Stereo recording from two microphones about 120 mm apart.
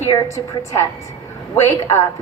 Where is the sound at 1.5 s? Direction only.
20° left (ahead or behind).